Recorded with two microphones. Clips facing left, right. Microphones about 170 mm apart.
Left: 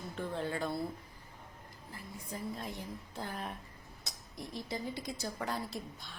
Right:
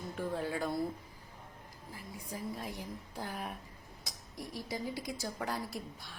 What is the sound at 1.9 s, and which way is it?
A woman's voice, 5° right (ahead or behind).